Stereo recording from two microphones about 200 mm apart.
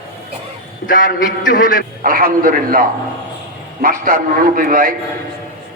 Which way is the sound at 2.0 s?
45° right (ahead or behind).